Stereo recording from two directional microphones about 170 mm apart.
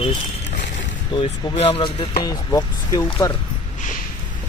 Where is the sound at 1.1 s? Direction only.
30° left (ahead or behind).